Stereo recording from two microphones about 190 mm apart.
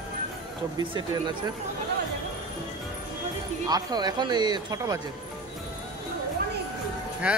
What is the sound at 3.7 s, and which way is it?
Speech, 20° right (ahead or behind).